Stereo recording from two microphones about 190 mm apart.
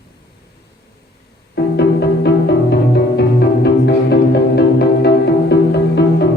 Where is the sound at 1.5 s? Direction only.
60° left (ahead or behind).